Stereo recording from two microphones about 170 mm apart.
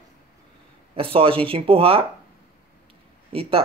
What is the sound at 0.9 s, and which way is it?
Speech, 35° right (ahead or behind).